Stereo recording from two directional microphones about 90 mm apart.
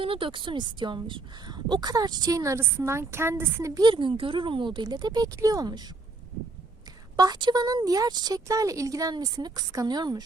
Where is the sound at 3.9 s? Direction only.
70° right (ahead or behind); by 5.8 s 45° right (ahead or behind).